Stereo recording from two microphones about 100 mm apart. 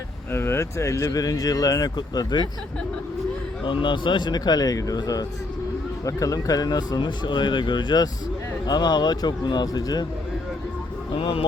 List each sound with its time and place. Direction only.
0.3 s speech: 25° left (ahead or behind); by 2.4 s 45° left (ahead or behind)
3.6 s speech: 55° left (ahead or behind)
11.1 s speech: 60° left (ahead or behind)